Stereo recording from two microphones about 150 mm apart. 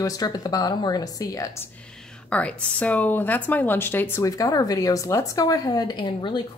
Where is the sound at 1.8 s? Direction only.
5° left (ahead or behind).